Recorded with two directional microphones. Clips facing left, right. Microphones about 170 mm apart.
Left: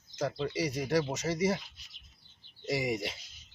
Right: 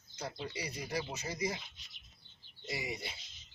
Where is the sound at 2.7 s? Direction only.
80° left.